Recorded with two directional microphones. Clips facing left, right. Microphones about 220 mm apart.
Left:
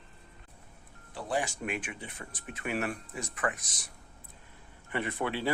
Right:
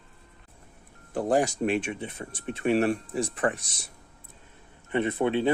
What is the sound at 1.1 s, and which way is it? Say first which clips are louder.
Speech: right 9 dB; 45° right (ahead or behind).